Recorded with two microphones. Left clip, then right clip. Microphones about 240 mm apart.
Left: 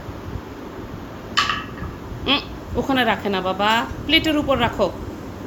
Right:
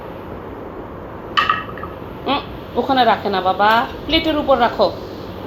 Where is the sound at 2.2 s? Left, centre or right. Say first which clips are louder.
Even; left.